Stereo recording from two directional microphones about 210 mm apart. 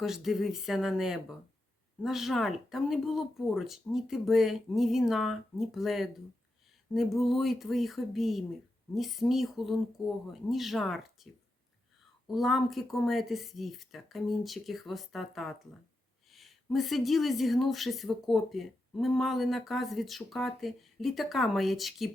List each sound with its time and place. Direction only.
0.0 s a woman's voice: centre (ahead or behind)
12.3 s a woman's voice: centre (ahead or behind)